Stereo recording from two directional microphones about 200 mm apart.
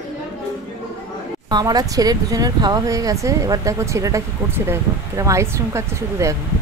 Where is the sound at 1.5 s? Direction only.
20° right (ahead or behind).